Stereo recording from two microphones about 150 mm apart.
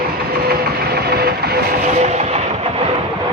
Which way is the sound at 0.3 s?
90° right.